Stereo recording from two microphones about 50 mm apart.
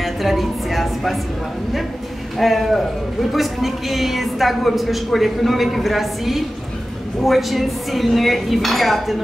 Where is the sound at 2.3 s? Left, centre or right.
Centre.